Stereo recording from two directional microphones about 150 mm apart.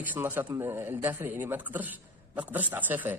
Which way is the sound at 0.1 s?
15° right (ahead or behind).